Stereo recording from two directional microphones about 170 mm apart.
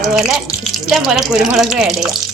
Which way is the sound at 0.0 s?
Centre (ahead or behind).